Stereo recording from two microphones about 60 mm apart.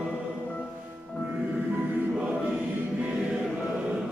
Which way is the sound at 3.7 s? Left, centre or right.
Centre.